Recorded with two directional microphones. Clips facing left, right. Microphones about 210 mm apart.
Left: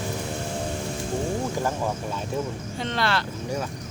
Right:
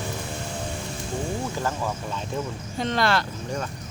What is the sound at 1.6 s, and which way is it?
Speech, 15° left (ahead or behind).